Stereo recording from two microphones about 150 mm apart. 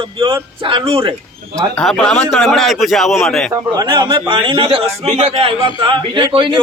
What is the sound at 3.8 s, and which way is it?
A man's voice, 30° right (ahead or behind).